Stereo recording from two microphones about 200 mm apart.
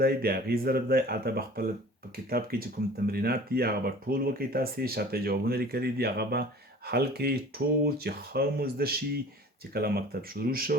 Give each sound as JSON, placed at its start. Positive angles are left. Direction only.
{"t": 0.0, "sound": "speech", "side_deg": -50}